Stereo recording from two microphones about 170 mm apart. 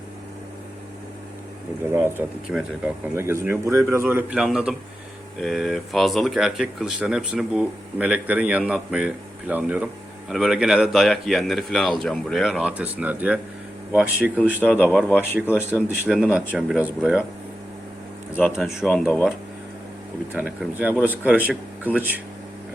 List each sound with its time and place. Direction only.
1.8 s speech: 15° right (ahead or behind)
18.5 s speech: 5° right (ahead or behind)
20.3 s speech: 5° right (ahead or behind)